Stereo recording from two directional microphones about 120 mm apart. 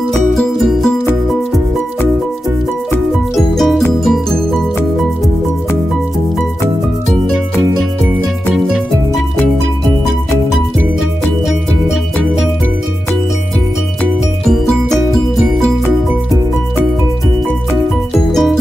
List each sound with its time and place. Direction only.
0.3 s music: centre (ahead or behind)
3.3 s music: centre (ahead or behind)
14.4 s music: centre (ahead or behind)
18.3 s music: 5° left (ahead or behind)